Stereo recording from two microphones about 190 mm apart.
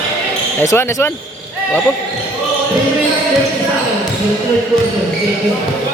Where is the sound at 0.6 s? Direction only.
15° left (ahead or behind).